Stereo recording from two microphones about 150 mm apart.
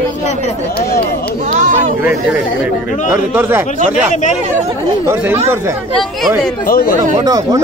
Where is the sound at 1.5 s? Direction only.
55° right (ahead or behind).